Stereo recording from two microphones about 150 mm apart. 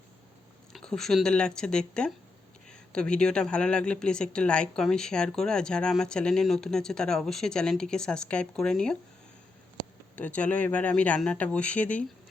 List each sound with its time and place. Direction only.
0.7 s speech: 5° left (ahead or behind)
10.2 s speech: 10° left (ahead or behind)